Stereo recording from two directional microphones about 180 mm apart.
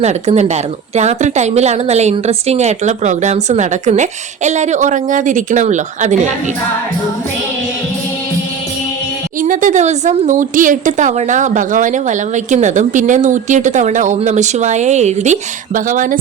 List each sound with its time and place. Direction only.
0.0 s a woman's voice: 40° right (ahead or behind)
9.4 s a woman's voice: 45° right (ahead or behind)